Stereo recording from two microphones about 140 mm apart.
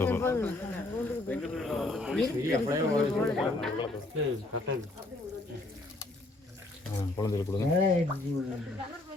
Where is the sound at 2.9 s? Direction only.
5° left (ahead or behind).